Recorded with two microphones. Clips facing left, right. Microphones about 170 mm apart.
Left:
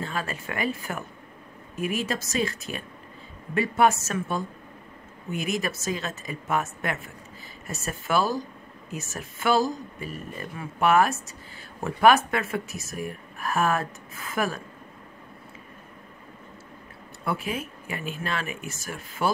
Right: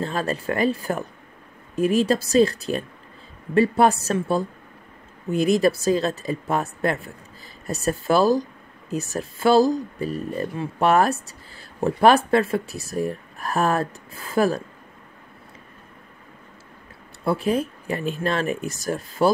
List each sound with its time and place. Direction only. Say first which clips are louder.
0.0 s speech: right 7 dB; 35° right (ahead or behind)
17.2 s speech: right 8 dB; 35° right (ahead or behind)